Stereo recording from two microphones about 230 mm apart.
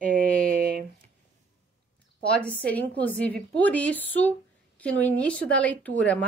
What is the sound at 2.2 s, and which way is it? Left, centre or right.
A woman's voice, centre.